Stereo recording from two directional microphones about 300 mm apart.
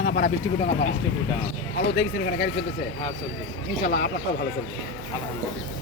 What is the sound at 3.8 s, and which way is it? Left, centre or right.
Speech, left.